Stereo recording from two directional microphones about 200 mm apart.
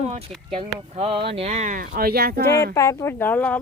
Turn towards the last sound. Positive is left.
turn(degrees=10)  # may be behind; listen again after turning